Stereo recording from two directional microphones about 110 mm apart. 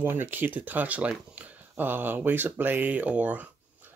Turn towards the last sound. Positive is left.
turn(degrees=-15)  # may be behind; listen again after turning